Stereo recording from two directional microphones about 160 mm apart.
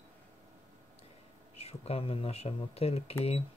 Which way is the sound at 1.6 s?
40° left (ahead or behind).